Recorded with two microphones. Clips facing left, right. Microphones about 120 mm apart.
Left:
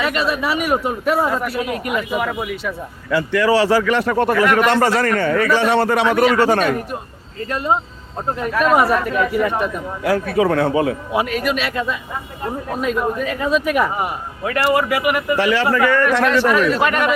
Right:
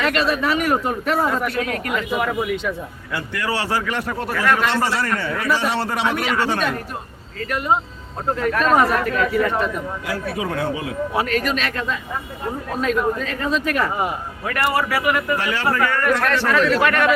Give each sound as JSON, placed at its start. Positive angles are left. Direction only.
{"t": 0.0, "sound": "a man's voice", "side_deg": 10}
{"t": 2.1, "sound": "speech", "side_deg": 5}
{"t": 3.1, "sound": "speech", "side_deg": 90}
{"t": 4.7, "sound": "a man's voice", "side_deg": 50}
{"t": 6.1, "sound": "a man's voice", "side_deg": 45}
{"t": 7.3, "sound": "speech", "side_deg": 25}
{"t": 8.4, "sound": "a man's voice", "side_deg": 15}
{"t": 10.0, "sound": "a man's voice", "side_deg": 60}
{"t": 11.1, "sound": "a man's voice", "side_deg": 15}